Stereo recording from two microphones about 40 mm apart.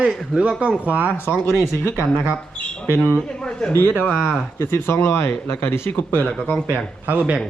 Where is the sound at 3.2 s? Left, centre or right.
Left.